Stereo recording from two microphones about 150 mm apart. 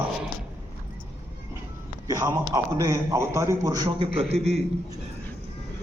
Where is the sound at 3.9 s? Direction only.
40° right (ahead or behind).